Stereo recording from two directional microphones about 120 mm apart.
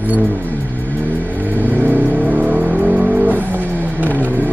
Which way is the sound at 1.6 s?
15° right (ahead or behind).